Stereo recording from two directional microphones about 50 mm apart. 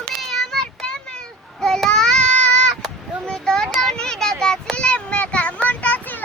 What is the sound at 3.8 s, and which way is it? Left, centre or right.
Child singing, centre.